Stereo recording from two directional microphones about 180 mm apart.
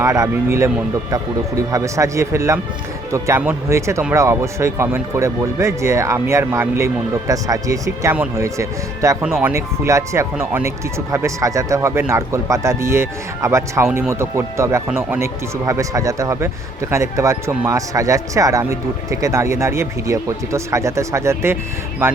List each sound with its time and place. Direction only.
0.0 s speech: 15° right (ahead or behind)
1.7 s speech: 15° right (ahead or behind)
9.2 s speech: 5° right (ahead or behind)
9.5 s speech: 15° right (ahead or behind)